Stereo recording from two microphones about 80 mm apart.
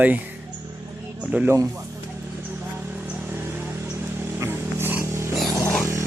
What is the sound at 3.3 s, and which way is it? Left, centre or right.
Vehicle, right.